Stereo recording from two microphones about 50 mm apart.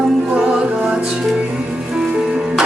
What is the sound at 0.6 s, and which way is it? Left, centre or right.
Music, right.